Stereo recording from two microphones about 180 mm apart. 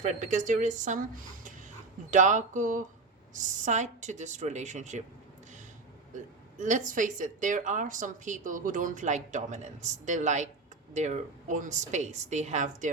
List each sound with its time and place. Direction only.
0.0 s speech: 40° right (ahead or behind)
6.1 s speech: 45° right (ahead or behind)